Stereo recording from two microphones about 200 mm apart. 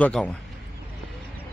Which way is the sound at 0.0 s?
5° left (ahead or behind).